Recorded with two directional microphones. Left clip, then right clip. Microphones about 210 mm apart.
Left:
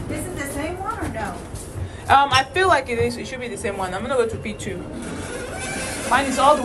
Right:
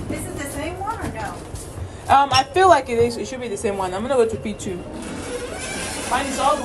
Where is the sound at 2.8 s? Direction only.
55° right (ahead or behind).